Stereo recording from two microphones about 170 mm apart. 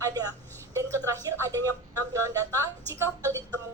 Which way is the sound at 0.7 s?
20° right (ahead or behind).